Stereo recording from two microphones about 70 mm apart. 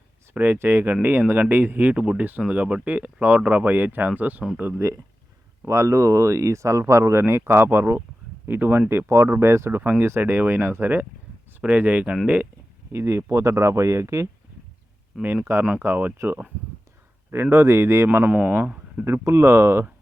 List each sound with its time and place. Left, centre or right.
0.3 s speech: right
5.6 s speech: right
12.9 s speech: right
15.2 s speech: right
19.0 s speech: right